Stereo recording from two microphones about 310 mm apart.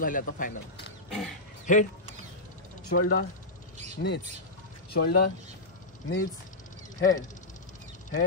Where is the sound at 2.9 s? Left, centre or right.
Left.